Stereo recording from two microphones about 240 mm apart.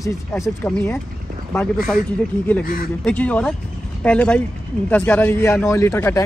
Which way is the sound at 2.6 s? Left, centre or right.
Left.